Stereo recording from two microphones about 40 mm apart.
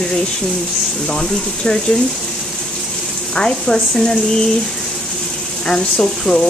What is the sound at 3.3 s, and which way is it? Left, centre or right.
Speech, centre.